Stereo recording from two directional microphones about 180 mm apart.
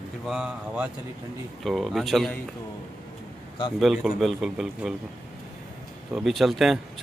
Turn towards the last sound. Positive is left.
turn(degrees=0)  # may be behind; listen again after turning